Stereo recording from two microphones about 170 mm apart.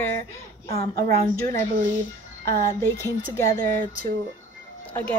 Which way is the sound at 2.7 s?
15° left (ahead or behind).